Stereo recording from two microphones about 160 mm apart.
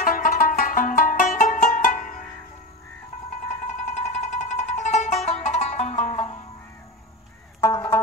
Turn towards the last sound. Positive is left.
turn(degrees=15)  # may be behind; listen again after turning